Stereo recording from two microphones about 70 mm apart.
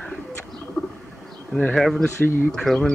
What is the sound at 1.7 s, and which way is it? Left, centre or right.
Speech, centre.